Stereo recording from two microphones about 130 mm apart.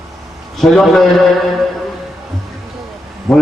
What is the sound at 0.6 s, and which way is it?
Speech, centre (ahead or behind).